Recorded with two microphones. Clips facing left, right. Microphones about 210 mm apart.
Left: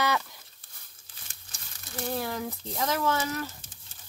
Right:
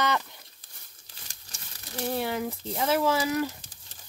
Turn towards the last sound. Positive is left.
turn(degrees=-10)  # may be behind; listen again after turning